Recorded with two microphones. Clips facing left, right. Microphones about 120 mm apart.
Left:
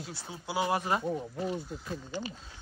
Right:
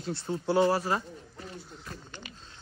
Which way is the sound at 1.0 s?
60° left (ahead or behind).